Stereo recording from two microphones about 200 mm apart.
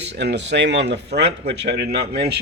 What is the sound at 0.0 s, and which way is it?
Speech, 60° right (ahead or behind).